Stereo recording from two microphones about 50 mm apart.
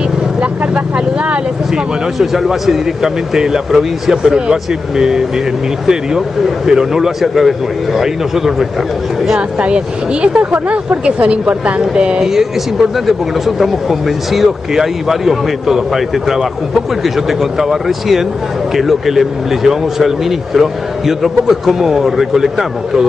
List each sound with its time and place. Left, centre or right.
0.4 s vehicle: right
2.1 s a man's voice: centre
9.6 s speech: right
10.4 s a man's voice: right; by 23.0 s centre